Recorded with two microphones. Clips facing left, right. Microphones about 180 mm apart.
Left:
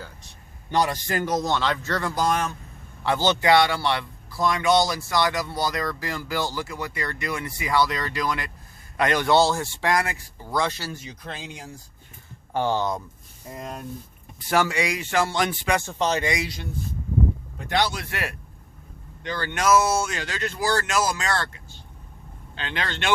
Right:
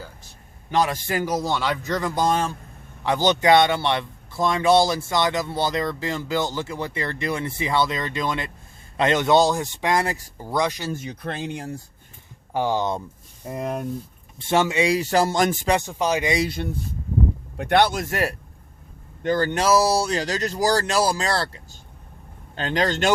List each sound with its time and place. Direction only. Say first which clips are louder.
1.0 s speech: right 1 dB; 10° right (ahead or behind); by 2.6 s 25° right (ahead or behind)
3.0 s speech: right 2 dB; 15° right (ahead or behind); by 10.4 s 35° right (ahead or behind)
10.5 s speech: right 2 dB; 15° right (ahead or behind)
10.9 s speech: right 7 dB; 60° right (ahead or behind)
12.5 s speech: right 1 dB; 15° right (ahead or behind)
13.5 s speech: right 7 dB; 65° right (ahead or behind)
14.3 s speech: right 2 dB; 25° right (ahead or behind); by 15.7 s 45° right (ahead or behind)
15.9 s speech: right 1 dB; 10° right (ahead or behind)
17.6 s a man's voice: right 6 dB; 60° right (ahead or behind); by 23.1 s 40° right (ahead or behind)